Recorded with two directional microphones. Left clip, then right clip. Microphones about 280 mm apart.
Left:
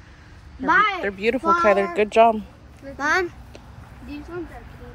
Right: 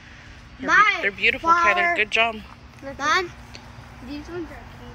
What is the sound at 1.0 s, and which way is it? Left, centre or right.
Speech, centre.